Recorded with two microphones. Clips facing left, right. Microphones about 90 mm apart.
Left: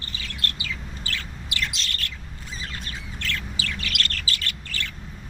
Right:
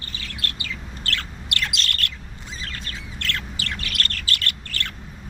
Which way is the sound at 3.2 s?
60° right (ahead or behind).